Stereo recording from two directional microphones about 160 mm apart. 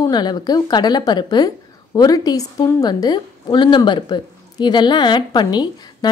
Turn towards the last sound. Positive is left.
turn(degrees=25)  # may be behind; listen again after turning